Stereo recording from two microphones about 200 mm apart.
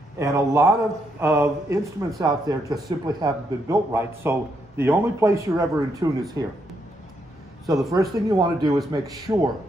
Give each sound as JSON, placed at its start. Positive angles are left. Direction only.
{"t": 0.2, "sound": "a man's voice", "side_deg": -15}
{"t": 7.9, "sound": "a man's voice", "side_deg": -20}